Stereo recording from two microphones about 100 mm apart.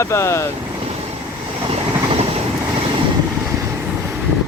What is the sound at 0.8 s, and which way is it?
Vehicle, 90° right.